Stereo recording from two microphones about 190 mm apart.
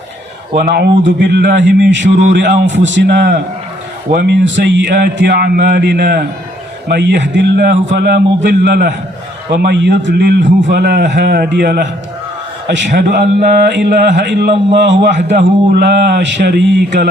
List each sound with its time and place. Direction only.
0.5 s mantra: 60° right (ahead or behind)
1.9 s a man's voice: 70° right (ahead or behind)
4.1 s mantra: 60° right (ahead or behind)